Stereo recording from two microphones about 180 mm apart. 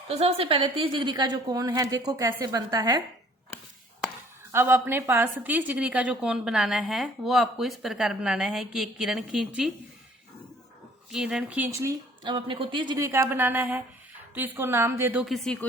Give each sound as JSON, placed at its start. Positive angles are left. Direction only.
{"t": 0.1, "sound": "a woman's voice", "side_deg": -35}
{"t": 4.5, "sound": "a woman's voice", "side_deg": -10}
{"t": 11.1, "sound": "speech", "side_deg": -5}